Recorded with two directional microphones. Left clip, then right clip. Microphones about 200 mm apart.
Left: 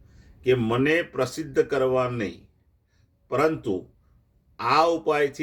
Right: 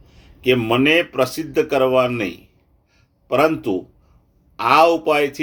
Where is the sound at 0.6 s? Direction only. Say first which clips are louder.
Right 7 dB; 5° left (ahead or behind).